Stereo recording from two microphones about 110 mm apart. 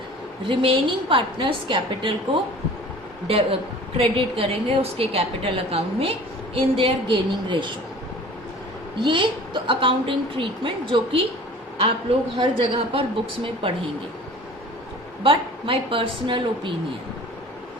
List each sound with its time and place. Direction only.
0.4 s a woman's voice: 50° right (ahead or behind)
3.2 s a woman's voice: 60° right (ahead or behind)
9.0 s a woman's voice: 50° right (ahead or behind)
12.4 s a woman's voice: 55° right (ahead or behind)
15.2 s a woman's voice: 55° right (ahead or behind)